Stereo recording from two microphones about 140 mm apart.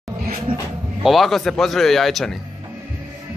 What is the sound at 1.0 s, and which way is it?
A man's voice, centre (ahead or behind).